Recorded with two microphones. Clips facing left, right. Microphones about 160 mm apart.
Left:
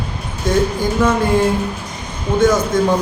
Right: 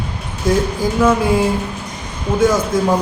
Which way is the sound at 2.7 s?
5° right (ahead or behind).